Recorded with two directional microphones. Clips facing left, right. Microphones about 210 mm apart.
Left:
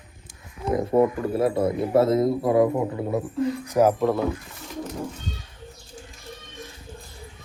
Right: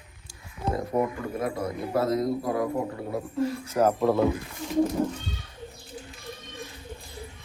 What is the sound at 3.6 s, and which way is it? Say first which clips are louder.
Speech: left 3 dB; 10° left (ahead or behind).